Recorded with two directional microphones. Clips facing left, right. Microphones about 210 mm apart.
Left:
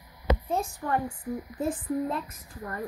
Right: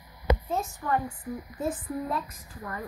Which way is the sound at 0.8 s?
30° left (ahead or behind).